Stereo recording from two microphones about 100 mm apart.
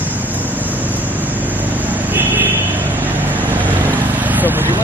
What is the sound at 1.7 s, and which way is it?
Vehicle, 15° right (ahead or behind).